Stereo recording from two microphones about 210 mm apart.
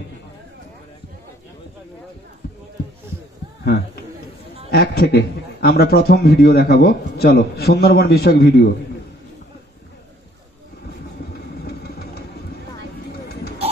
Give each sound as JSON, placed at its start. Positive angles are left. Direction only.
{"t": 3.6, "sound": "a man's voice", "side_deg": 50}
{"t": 11.3, "sound": "vehicle", "side_deg": 50}